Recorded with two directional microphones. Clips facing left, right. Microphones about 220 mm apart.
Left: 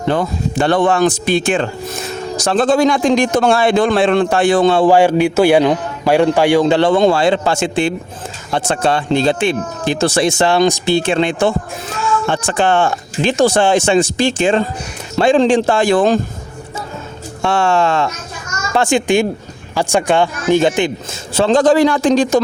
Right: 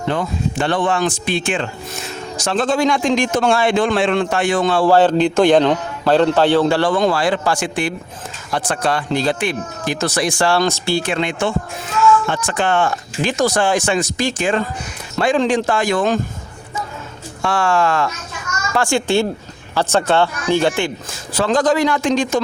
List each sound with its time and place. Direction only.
0.1 s speech: 35° left (ahead or behind)
17.4 s speech: 25° left (ahead or behind)